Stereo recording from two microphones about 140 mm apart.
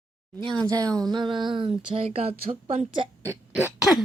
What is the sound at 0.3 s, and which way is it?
A woman's voice, 35° right (ahead or behind).